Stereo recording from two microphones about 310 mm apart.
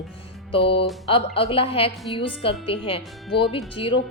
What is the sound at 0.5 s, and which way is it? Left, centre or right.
A woman's voice, centre.